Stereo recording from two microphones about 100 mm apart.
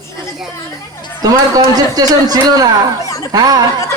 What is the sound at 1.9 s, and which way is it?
Speech, 40° right (ahead or behind).